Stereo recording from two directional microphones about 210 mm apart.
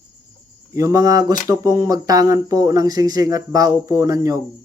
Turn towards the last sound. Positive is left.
turn(degrees=-15)  # may be behind; listen again after turning